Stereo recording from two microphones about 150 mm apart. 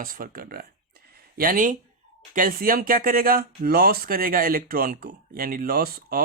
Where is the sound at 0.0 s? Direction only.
70° right (ahead or behind).